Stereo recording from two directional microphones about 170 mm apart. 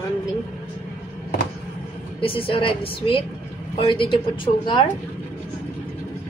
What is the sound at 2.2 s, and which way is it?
A woman's voice, 35° left (ahead or behind).